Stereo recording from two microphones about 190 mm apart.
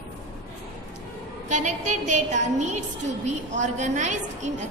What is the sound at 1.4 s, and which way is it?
A woman's voice, 40° right (ahead or behind).